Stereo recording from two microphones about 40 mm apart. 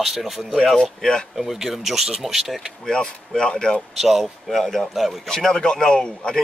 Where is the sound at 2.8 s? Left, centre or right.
Centre.